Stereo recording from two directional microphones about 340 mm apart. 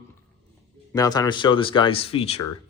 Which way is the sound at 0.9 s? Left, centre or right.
Centre.